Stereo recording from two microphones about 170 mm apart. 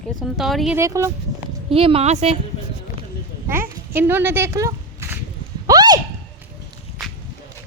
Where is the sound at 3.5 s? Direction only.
10° right (ahead or behind).